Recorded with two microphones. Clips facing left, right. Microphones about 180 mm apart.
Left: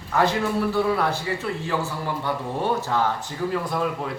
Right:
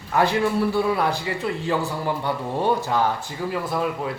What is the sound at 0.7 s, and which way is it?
Speech, 15° right (ahead or behind).